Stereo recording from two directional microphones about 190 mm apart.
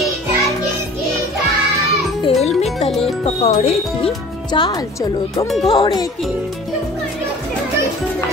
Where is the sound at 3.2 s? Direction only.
35° left (ahead or behind).